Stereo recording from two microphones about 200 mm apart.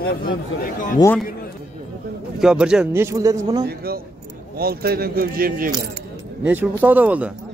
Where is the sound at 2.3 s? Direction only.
5° right (ahead or behind).